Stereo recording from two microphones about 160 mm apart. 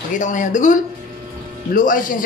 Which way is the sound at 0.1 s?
50° left (ahead or behind).